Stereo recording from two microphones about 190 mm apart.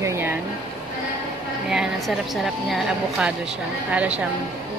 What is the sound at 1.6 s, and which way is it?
A woman's voice, centre (ahead or behind).